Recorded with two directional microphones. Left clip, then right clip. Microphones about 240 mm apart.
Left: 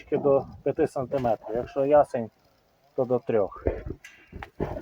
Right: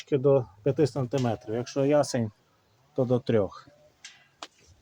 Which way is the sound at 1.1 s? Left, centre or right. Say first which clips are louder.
Left 6 dB; right.